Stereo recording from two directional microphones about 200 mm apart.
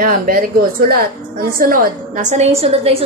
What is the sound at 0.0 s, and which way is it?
A woman's voice, 45° right (ahead or behind).